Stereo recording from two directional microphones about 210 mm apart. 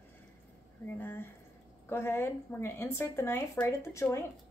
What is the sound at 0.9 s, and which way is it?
Speech, 10° left (ahead or behind).